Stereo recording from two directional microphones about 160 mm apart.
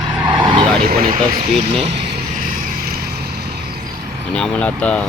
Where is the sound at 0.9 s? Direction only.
65° right (ahead or behind).